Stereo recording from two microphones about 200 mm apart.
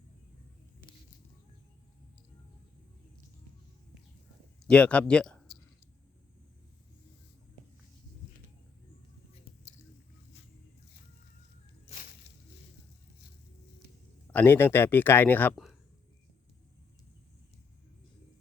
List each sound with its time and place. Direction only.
4.6 s speech: 5° left (ahead or behind)
11.9 s a sound: 45° left (ahead or behind)
14.3 s speech: 10° left (ahead or behind)